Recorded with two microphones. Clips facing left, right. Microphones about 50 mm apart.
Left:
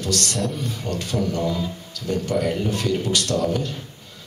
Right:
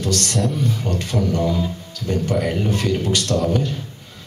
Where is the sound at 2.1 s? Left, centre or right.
Right.